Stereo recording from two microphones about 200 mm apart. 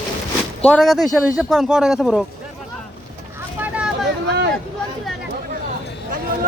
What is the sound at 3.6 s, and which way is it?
Vehicle, 5° right (ahead or behind).